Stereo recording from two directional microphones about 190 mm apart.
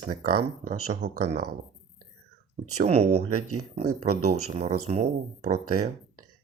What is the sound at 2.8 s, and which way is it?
Speech, 35° right (ahead or behind).